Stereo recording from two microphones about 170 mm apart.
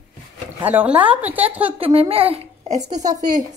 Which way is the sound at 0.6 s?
10° right (ahead or behind).